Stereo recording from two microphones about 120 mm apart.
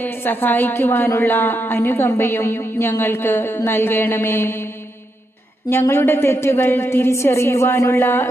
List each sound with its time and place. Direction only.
0.0 s a woman's voice: 15° left (ahead or behind)
5.9 s a woman's voice: 20° left (ahead or behind)